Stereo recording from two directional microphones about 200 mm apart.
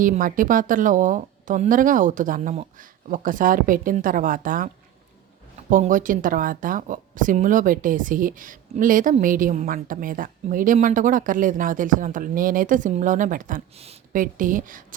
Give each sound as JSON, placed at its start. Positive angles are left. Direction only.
{"t": 0.0, "sound": "speech", "side_deg": -45}